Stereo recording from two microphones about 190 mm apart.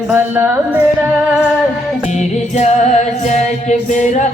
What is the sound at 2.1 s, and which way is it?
Music, 35° left (ahead or behind).